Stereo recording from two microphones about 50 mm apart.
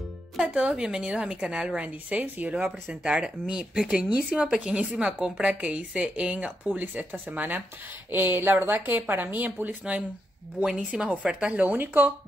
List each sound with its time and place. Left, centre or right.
0.4 s a woman's voice: centre
1.9 s speech: right
2.5 s speech: right
4.0 s speech: right
4.4 s a woman's voice: centre
5.5 s speech: right
10.6 s a woman's voice: centre
11.7 s speech: right